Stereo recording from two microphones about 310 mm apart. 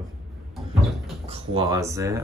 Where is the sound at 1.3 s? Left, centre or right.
Centre.